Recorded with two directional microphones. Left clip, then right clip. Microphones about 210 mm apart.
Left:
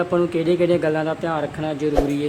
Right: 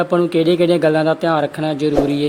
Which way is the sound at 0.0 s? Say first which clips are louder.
Right 5 dB; 25° right (ahead or behind).